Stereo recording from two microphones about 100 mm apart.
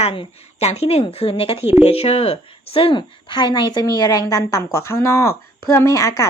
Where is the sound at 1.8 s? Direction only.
90° left.